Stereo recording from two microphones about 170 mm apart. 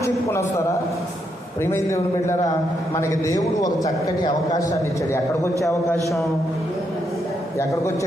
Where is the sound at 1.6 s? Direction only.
15° left (ahead or behind).